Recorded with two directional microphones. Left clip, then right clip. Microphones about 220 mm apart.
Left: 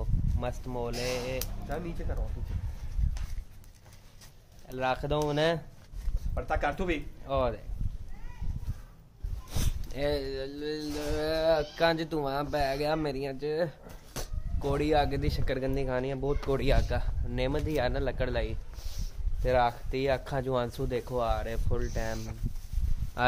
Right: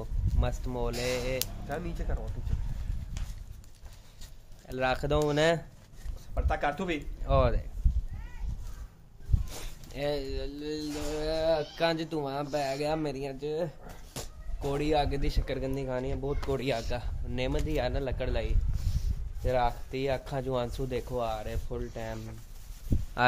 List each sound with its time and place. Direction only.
0.0 s speech: 15° right (ahead or behind)
4.6 s speech: 20° right (ahead or behind)
9.9 s speech: 5° left (ahead or behind)